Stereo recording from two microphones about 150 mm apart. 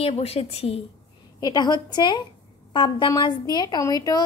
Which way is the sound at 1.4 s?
25° left (ahead or behind).